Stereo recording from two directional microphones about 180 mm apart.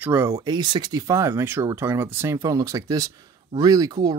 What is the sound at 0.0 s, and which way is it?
Speech, 10° right (ahead or behind).